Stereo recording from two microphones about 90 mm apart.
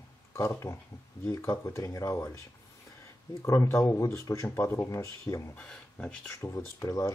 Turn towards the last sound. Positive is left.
turn(degrees=30)  # may be behind; listen again after turning